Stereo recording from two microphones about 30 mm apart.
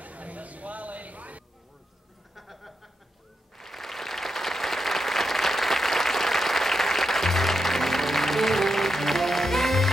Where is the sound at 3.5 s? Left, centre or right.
Centre.